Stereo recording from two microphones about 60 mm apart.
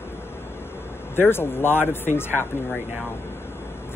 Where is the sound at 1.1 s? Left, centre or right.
Left.